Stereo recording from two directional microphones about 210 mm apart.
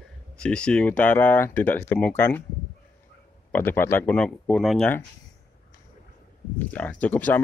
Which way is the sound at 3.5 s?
10° left (ahead or behind).